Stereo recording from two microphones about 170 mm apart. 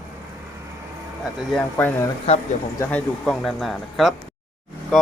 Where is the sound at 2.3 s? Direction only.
40° left (ahead or behind).